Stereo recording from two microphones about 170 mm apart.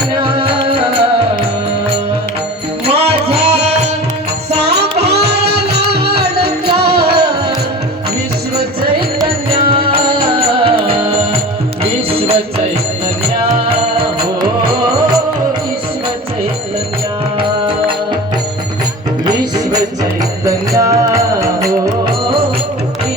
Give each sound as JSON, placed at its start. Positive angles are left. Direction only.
{"t": 0.2, "sound": "music", "side_deg": -30}
{"t": 2.8, "sound": "music", "side_deg": -35}
{"t": 4.5, "sound": "music", "side_deg": -75}
{"t": 9.0, "sound": "music", "side_deg": -30}
{"t": 13.4, "sound": "music", "side_deg": -30}
{"t": 17.3, "sound": "music", "side_deg": -30}
{"t": 19.3, "sound": "music", "side_deg": -25}